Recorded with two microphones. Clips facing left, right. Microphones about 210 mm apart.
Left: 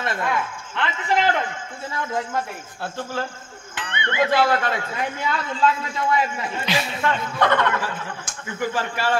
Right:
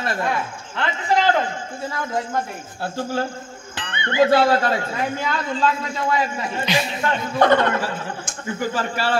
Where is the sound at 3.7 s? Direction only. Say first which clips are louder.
Right 1 dB; 30° right (ahead or behind).